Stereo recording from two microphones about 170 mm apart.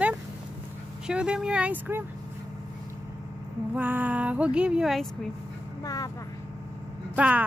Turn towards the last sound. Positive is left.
turn(degrees=-10)  # may be behind; listen again after turning